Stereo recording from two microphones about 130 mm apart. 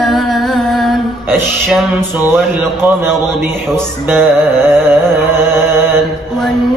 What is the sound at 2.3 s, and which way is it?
Speech, 20° right (ahead or behind).